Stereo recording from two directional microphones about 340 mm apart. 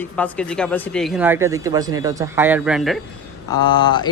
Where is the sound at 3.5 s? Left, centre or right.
Centre.